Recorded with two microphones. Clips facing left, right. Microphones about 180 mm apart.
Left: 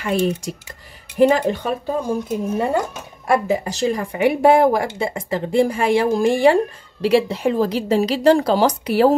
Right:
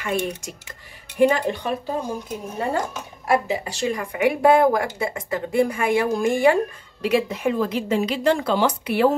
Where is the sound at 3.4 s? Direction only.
40° left (ahead or behind).